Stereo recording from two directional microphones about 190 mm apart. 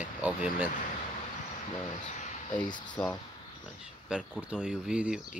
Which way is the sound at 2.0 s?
40° left (ahead or behind).